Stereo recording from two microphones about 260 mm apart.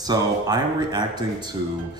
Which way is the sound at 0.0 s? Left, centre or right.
Centre.